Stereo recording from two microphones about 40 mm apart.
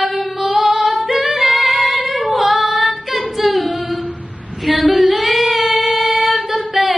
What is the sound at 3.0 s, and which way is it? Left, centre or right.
Singing, centre.